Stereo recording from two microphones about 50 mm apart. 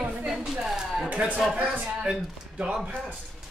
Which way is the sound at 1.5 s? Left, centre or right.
Right.